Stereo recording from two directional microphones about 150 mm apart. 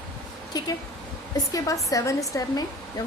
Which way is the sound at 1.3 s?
20° left (ahead or behind).